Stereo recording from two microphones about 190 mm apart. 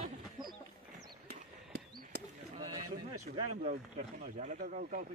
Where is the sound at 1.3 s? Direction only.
55° right (ahead or behind).